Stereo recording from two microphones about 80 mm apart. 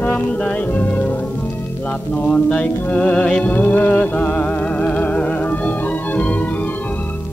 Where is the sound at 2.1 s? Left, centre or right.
Centre.